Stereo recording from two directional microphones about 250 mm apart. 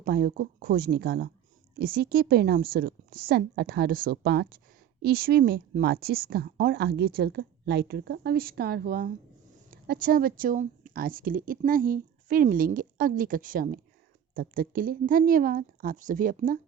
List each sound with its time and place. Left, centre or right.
0.0 s a woman's voice: right